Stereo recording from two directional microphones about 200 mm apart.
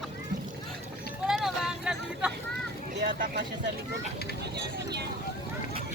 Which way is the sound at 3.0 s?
50° right (ahead or behind).